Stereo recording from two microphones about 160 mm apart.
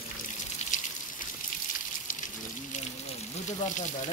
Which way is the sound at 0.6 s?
45° left (ahead or behind).